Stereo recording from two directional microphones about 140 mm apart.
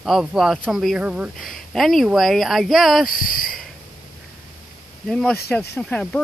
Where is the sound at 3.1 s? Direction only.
90° left.